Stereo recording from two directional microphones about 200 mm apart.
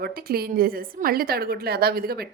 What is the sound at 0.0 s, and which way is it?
A woman's voice, 50° right (ahead or behind).